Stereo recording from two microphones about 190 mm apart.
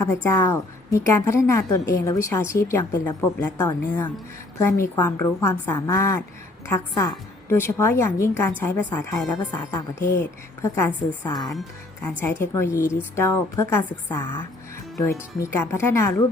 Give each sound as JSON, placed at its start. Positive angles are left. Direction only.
{"t": 0.0, "sound": "a woman's voice", "side_deg": 15}
{"t": 9.4, "sound": "a woman's voice", "side_deg": 20}
{"t": 10.6, "sound": "a woman's voice", "side_deg": 10}